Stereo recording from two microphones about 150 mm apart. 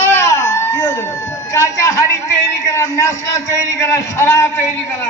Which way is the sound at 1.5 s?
20° left (ahead or behind).